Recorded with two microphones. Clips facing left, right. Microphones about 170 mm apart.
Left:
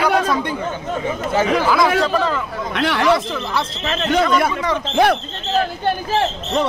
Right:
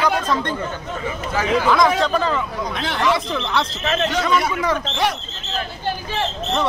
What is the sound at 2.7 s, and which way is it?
Speech, 70° left (ahead or behind).